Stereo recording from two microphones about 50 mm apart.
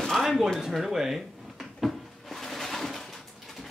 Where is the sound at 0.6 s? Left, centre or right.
Centre.